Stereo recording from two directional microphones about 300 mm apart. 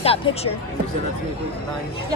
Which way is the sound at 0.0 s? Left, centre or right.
Centre.